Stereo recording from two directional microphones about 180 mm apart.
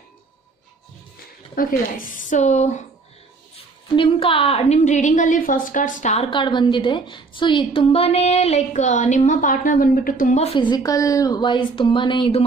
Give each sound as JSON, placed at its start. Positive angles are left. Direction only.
{"t": 1.5, "sound": "speech", "side_deg": 50}
{"t": 3.5, "sound": "a woman's voice", "side_deg": 30}